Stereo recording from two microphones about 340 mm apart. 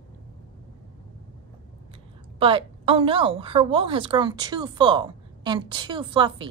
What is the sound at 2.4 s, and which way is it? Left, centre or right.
A woman's voice, centre.